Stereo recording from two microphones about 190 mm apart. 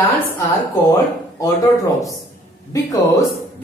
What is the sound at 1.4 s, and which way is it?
Speech, 20° left (ahead or behind).